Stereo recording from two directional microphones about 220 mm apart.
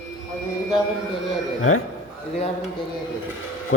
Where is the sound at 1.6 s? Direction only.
70° left (ahead or behind).